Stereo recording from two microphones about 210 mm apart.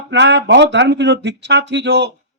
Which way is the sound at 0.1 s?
55° right (ahead or behind).